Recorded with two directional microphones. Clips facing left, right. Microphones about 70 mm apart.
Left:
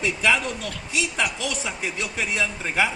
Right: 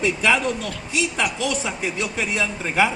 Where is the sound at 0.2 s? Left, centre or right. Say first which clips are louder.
Right 2 dB; right.